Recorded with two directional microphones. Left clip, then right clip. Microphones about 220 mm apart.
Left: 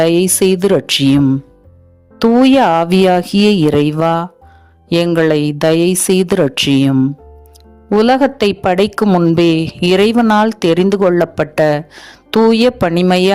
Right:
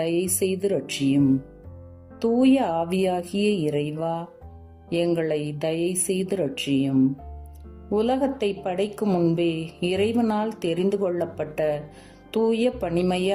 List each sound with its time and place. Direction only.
0.0 s a woman's voice: 50° left (ahead or behind)